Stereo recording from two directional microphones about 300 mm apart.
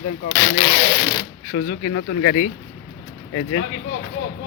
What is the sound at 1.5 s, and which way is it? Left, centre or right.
Speech, left.